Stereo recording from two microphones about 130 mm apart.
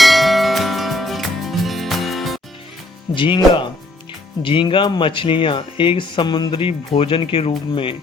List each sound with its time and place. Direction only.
0.0 s music: centre (ahead or behind)
3.2 s speech: 40° left (ahead or behind)